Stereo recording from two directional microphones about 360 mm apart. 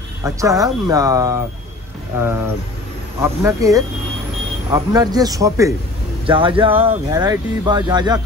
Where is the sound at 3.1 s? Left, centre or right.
Centre.